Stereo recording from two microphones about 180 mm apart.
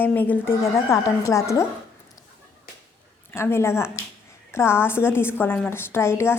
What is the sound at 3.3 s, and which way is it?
A woman's voice, 15° left (ahead or behind).